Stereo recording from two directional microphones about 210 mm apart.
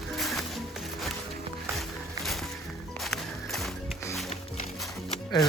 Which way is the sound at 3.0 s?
Centre (ahead or behind).